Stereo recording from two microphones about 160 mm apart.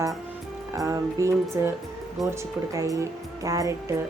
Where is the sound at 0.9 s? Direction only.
20° right (ahead or behind).